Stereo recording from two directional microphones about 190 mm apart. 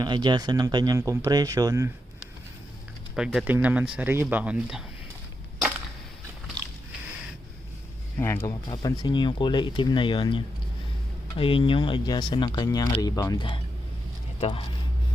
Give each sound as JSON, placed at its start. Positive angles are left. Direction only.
{"t": 0.0, "sound": "speech", "side_deg": -25}
{"t": 3.2, "sound": "speech", "side_deg": 0}
{"t": 8.2, "sound": "speech", "side_deg": 15}